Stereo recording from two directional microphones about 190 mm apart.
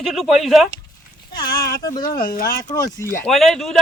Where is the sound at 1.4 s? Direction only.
20° left (ahead or behind).